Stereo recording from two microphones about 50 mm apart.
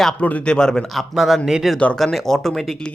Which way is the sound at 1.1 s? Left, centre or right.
Centre.